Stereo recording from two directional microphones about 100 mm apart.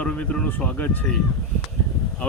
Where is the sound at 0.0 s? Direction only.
10° left (ahead or behind).